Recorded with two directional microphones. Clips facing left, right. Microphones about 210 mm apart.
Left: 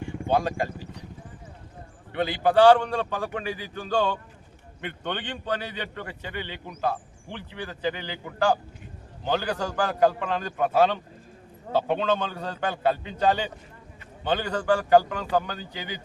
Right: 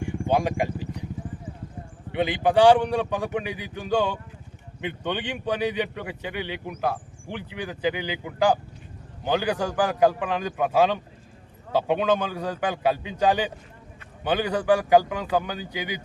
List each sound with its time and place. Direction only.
0.0 s vehicle: 15° right (ahead or behind)
2.1 s a man's voice: 15° right (ahead or behind)